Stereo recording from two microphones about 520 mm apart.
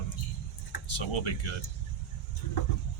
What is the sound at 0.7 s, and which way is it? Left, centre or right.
Speech, left.